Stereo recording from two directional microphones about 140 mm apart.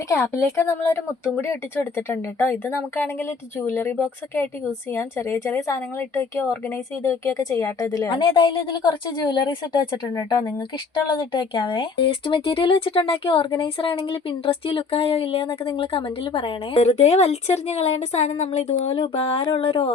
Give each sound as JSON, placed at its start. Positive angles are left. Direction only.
{"t": 0.1, "sound": "speech", "side_deg": 20}